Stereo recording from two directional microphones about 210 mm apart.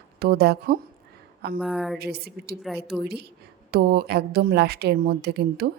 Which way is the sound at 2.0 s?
50° right (ahead or behind).